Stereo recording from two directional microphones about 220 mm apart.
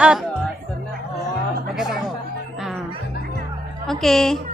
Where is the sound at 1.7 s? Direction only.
Centre (ahead or behind).